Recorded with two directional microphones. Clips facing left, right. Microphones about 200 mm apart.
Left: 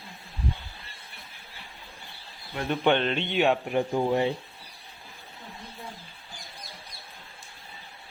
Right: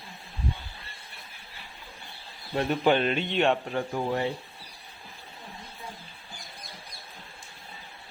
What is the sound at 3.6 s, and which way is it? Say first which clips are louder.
Speech: left 4 dB; 15° left (ahead or behind).